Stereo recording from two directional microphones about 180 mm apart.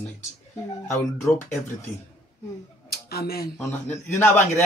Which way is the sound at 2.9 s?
60° left (ahead or behind).